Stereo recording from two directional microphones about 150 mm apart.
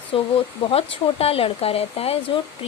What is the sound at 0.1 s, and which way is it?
Speech, 35° left (ahead or behind).